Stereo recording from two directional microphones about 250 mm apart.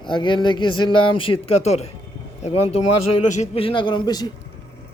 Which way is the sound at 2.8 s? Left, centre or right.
Left.